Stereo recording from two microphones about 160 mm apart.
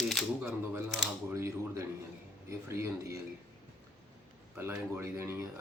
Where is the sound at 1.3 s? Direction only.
15° right (ahead or behind).